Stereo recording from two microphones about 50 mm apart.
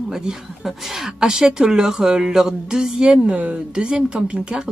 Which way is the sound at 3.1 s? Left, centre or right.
Right.